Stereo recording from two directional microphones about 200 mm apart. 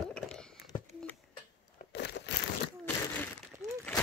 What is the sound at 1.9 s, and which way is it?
Crumpling, 60° left (ahead or behind).